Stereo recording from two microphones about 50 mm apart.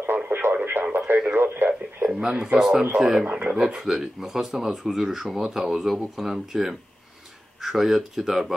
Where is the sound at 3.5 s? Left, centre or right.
Centre.